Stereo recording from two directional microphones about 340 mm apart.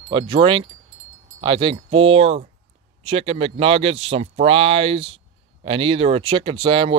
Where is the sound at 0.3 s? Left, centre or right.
Centre.